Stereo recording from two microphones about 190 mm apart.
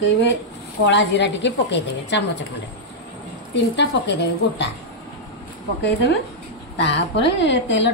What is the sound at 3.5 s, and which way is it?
A woman's voice, 70° left (ahead or behind).